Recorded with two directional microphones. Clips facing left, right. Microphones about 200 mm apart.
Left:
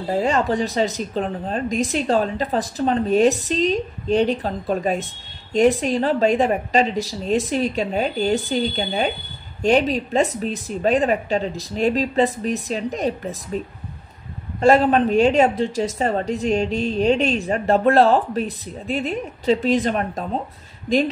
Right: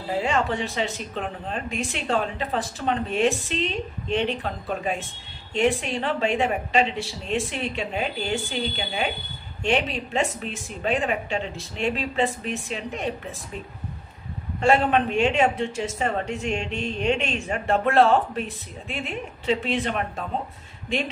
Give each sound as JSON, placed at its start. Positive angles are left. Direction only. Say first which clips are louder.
{"t": 0.2, "sound": "a woman's voice", "louder": "left 5 dB", "side_deg": 40}
{"t": 14.6, "sound": "a woman's voice", "louder": "left 5 dB", "side_deg": 40}